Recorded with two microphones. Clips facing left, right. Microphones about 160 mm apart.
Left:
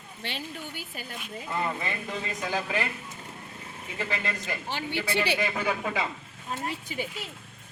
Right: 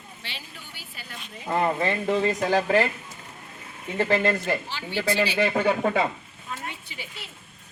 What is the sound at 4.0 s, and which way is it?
Speech, 35° right (ahead or behind).